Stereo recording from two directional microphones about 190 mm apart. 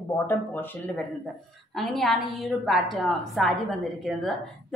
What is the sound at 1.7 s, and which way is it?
A woman's voice, centre (ahead or behind).